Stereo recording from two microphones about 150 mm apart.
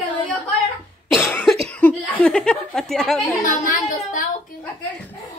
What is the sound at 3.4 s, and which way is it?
Speech, 65° left (ahead or behind).